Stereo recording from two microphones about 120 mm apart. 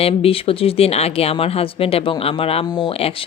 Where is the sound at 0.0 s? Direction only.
55° left (ahead or behind).